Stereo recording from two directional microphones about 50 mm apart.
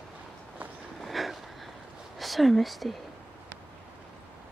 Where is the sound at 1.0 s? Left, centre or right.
Centre.